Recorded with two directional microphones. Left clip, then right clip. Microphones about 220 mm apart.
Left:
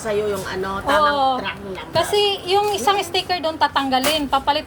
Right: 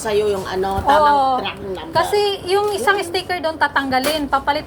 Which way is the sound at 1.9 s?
20° left (ahead or behind).